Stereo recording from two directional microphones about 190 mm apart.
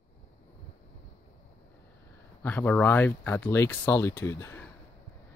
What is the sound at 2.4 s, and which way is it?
Speech, 10° left (ahead or behind).